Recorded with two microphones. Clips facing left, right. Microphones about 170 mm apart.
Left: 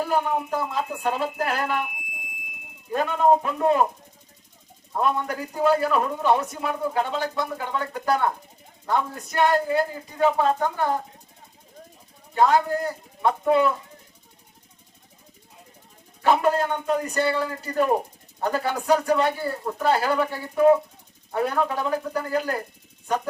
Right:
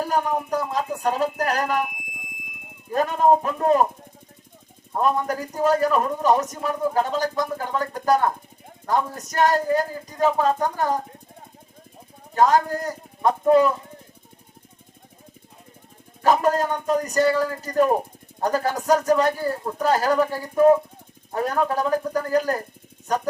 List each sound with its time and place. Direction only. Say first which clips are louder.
0.0 s a man's voice: even; 40° right (ahead or behind)
2.9 s a man's voice: right 1 dB; 40° right (ahead or behind)
4.9 s a man's voice: right 2 dB; 40° right (ahead or behind)
12.3 s speech: right 1 dB; 40° right (ahead or behind)
16.2 s a man's voice: right 1 dB; 40° right (ahead or behind)